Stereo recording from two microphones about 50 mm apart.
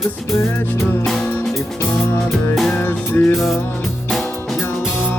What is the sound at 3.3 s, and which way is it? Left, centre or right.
Music, centre.